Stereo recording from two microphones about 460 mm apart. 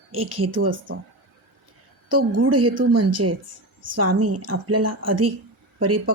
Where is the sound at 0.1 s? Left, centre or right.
Right.